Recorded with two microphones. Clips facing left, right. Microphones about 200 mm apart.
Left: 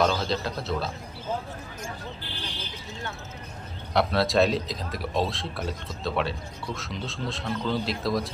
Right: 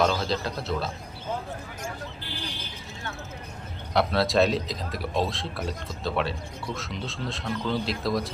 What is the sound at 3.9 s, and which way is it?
A man's voice, centre (ahead or behind).